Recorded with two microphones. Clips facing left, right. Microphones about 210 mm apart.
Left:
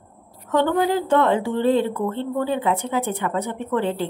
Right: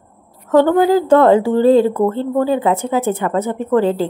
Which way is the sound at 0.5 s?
40° right (ahead or behind).